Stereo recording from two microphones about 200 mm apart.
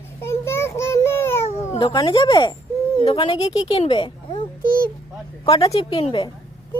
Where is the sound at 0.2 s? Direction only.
10° left (ahead or behind).